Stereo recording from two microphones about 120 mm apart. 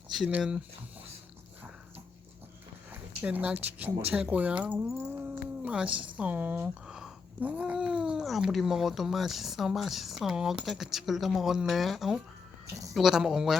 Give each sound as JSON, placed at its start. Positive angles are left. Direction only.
{"t": 0.3, "sound": "speech", "side_deg": -10}
{"t": 2.9, "sound": "speech", "side_deg": -15}